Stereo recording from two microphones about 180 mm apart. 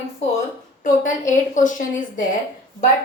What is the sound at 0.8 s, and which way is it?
A woman's voice, 45° left (ahead or behind).